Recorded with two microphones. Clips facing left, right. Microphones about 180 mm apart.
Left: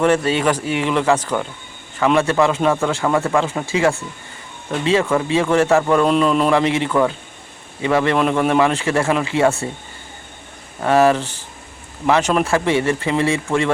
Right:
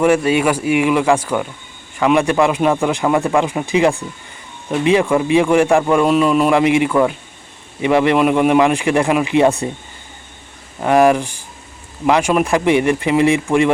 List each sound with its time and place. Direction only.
0.0 s a man's voice: 10° right (ahead or behind)
10.8 s a man's voice: 15° right (ahead or behind)